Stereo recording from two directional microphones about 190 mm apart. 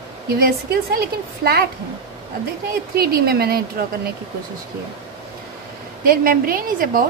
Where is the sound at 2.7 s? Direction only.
50° right (ahead or behind).